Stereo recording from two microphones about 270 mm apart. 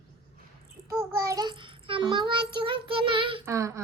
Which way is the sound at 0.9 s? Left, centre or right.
Centre.